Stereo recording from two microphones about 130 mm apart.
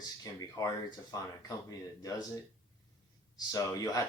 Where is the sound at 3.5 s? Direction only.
30° left (ahead or behind).